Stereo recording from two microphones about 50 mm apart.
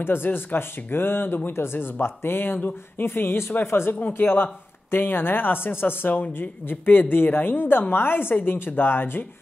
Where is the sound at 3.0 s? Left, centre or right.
Left.